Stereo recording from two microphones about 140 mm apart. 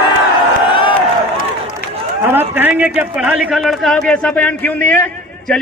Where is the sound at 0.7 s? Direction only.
35° left (ahead or behind).